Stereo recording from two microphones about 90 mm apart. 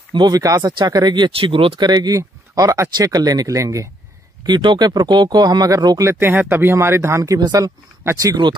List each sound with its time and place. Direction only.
0.3 s speech: 40° right (ahead or behind)
0.7 s speech: 55° right (ahead or behind)
1.4 s speech: 85° right
1.8 s speech: 50° right (ahead or behind)
4.5 s speech: 60° right (ahead or behind); by 6.0 s 45° right (ahead or behind)
6.0 s speech: 25° right (ahead or behind)
7.3 s speech: 50° right (ahead or behind)
8.0 s speech: 35° right (ahead or behind)